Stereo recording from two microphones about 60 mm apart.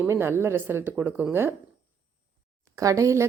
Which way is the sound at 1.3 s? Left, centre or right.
Right.